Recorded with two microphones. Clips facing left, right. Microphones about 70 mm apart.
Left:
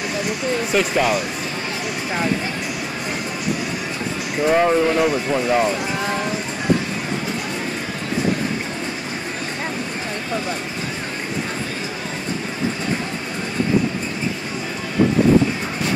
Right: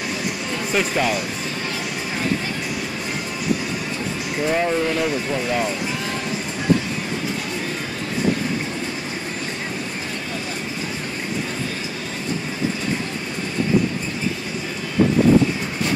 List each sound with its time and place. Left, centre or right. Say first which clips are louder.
0.7 s speech: left 1 dB; centre
4.5 s speech: left 5 dB; left